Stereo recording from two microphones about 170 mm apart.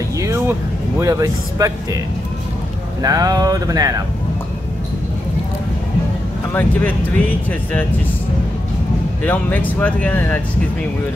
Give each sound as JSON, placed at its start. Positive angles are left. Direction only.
{"t": 0.2, "sound": "speech", "side_deg": -15}
{"t": 3.0, "sound": "speech", "side_deg": -20}
{"t": 6.5, "sound": "speech", "side_deg": 10}
{"t": 9.2, "sound": "speech", "side_deg": 10}